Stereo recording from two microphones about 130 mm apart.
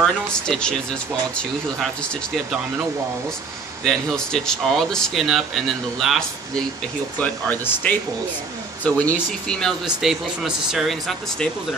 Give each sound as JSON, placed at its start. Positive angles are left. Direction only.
{"t": 0.0, "sound": "speech", "side_deg": 5}
{"t": 3.8, "sound": "speech", "side_deg": 5}
{"t": 7.2, "sound": "speech", "side_deg": 15}
{"t": 9.9, "sound": "speech", "side_deg": -5}